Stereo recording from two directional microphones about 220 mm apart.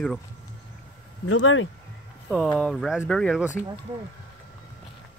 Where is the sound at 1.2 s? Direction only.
65° left (ahead or behind).